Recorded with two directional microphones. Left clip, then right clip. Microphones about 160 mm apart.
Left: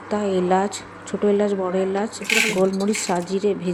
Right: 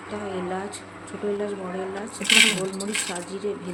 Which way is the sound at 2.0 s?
45° left (ahead or behind).